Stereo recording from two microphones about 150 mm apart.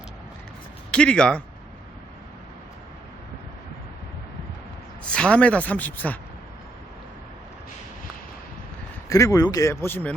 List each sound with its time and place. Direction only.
0.9 s speech: 5° left (ahead or behind)
5.1 s speech: 5° left (ahead or behind)
9.0 s speech: 20° left (ahead or behind)